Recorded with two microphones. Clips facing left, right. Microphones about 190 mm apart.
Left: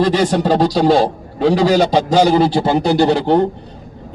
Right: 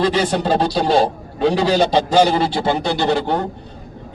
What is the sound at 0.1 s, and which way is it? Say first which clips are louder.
A man's voice: left 3 dB; 40° left (ahead or behind).